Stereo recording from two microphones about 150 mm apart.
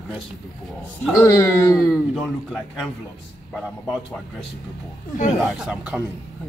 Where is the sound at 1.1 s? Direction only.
20° left (ahead or behind).